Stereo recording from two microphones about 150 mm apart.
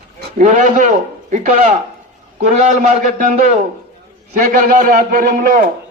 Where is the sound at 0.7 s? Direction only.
55° right (ahead or behind).